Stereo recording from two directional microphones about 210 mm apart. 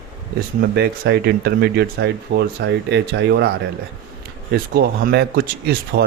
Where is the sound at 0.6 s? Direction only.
50° right (ahead or behind).